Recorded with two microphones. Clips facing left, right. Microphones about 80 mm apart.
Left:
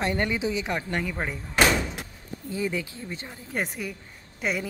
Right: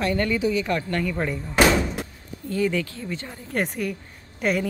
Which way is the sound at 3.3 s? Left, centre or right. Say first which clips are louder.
Right 4 dB; centre.